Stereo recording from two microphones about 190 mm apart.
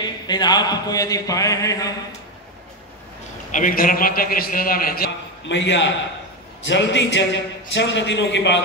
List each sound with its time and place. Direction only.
0.0 s speech: 20° left (ahead or behind)
3.5 s a man's voice: 45° left (ahead or behind); by 8.6 s 70° left (ahead or behind)